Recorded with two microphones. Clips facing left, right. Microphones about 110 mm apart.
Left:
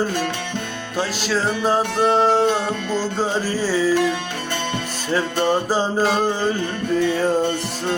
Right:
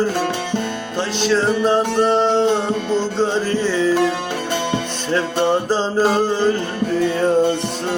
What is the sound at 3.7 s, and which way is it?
Music, 5° left (ahead or behind).